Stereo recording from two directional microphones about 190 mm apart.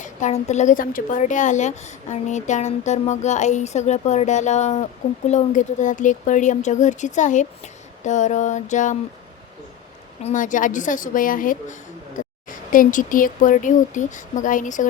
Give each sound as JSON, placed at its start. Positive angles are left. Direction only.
{"t": 0.0, "sound": "a woman's voice", "side_deg": 40}
{"t": 10.2, "sound": "speech", "side_deg": 40}